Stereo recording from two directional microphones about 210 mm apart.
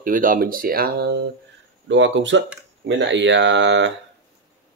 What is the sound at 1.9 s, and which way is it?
Speech, 60° right (ahead or behind).